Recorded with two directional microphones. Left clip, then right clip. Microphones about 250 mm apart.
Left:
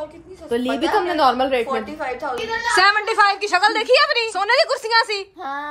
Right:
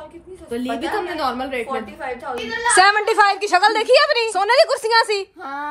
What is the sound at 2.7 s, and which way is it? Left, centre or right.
A woman's voice, centre.